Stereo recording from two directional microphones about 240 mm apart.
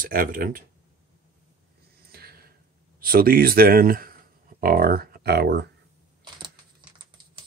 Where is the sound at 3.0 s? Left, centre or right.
Right.